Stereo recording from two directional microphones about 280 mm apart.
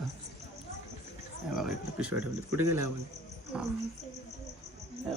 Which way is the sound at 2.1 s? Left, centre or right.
Right.